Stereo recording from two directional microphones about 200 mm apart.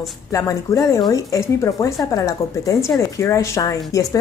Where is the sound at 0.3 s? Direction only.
15° left (ahead or behind).